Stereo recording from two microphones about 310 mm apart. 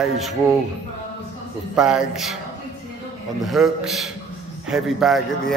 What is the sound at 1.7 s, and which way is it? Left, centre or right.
Speech, centre.